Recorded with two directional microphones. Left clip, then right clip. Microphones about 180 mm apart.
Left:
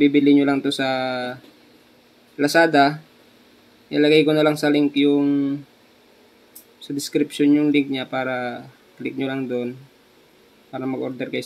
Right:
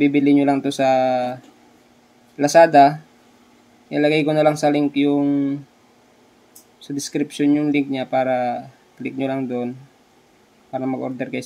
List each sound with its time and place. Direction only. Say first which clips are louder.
0.0 s speech: even; 20° right (ahead or behind)
7.0 s speech: left 2 dB; 20° right (ahead or behind)
10.7 s speech: right 2 dB; 20° right (ahead or behind)